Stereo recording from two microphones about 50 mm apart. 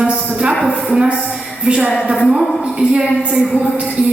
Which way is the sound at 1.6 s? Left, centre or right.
Right.